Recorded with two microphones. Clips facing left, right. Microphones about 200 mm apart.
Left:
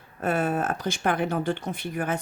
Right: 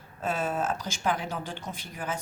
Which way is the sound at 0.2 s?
60° left (ahead or behind).